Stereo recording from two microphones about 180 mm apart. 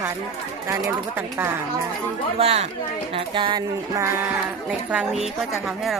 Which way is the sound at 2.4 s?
35° right (ahead or behind).